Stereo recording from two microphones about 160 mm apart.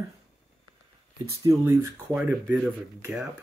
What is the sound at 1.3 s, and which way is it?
Speech, 20° right (ahead or behind).